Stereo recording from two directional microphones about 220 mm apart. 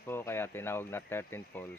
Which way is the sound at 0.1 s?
10° left (ahead or behind).